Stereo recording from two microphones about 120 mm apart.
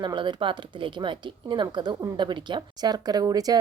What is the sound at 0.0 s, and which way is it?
Speech, 40° right (ahead or behind).